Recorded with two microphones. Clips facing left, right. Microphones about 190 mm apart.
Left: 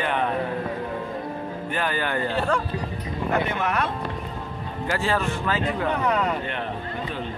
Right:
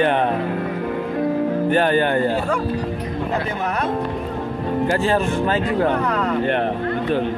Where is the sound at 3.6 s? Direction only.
40° right (ahead or behind).